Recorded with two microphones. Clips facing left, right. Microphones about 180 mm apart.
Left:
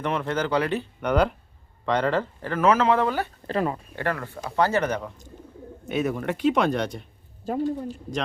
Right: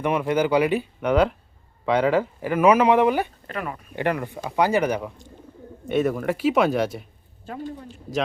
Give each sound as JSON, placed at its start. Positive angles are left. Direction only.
{"t": 0.0, "sound": "speech", "side_deg": -10}
{"t": 3.4, "sound": "speech", "side_deg": 30}
{"t": 3.9, "sound": "speech", "side_deg": -15}
{"t": 5.9, "sound": "speech", "side_deg": 0}
{"t": 7.4, "sound": "speech", "side_deg": 40}